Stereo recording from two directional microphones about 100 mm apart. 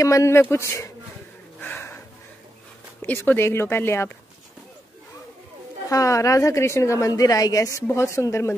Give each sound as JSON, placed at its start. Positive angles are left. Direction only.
{"t": 0.0, "sound": "a woman's voice", "side_deg": 30}
{"t": 1.6, "sound": "a sound", "side_deg": 20}
{"t": 3.0, "sound": "speech", "side_deg": 20}
{"t": 5.9, "sound": "a woman's voice", "side_deg": 35}